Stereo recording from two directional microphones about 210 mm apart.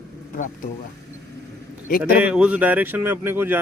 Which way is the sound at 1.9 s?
45° left (ahead or behind).